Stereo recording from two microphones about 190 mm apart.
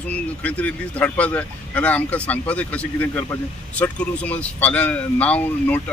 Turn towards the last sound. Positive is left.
turn(degrees=10)  # may be behind; listen again after turning